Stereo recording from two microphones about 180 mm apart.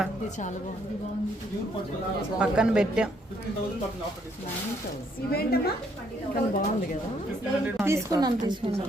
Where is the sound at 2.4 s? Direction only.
5° right (ahead or behind).